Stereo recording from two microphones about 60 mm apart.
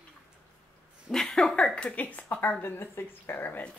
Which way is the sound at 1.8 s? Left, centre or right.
Left.